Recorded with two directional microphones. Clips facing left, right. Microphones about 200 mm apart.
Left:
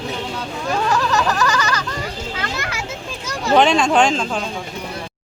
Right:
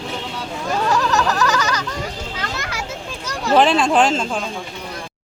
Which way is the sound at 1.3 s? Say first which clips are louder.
Even; centre (ahead or behind).